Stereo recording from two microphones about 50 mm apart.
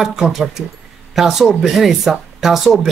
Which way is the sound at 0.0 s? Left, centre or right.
Centre.